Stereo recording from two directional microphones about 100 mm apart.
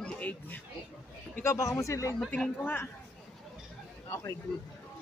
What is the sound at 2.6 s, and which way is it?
Speech, 20° left (ahead or behind).